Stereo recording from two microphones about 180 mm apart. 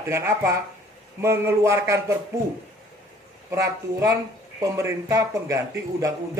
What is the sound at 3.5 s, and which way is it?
A man's voice, 15° right (ahead or behind).